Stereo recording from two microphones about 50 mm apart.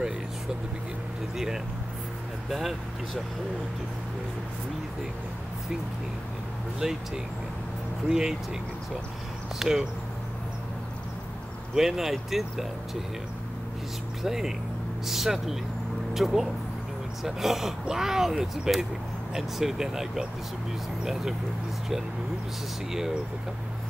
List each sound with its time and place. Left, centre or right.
1.3 s speech: centre
6.8 s speech: centre
8.1 s speech: centre
9.6 s speech: centre
11.7 s speech: centre
14.2 s speech: centre